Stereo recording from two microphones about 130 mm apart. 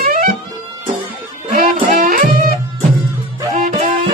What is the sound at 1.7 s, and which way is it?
Music, 80° right.